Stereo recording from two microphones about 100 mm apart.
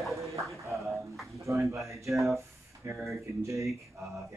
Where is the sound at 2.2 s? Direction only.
30° right (ahead or behind).